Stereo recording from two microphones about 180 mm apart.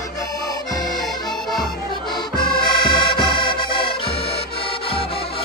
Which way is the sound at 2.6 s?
25° left (ahead or behind).